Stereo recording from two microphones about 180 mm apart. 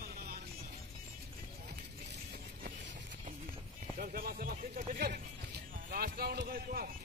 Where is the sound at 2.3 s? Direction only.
60° right (ahead or behind).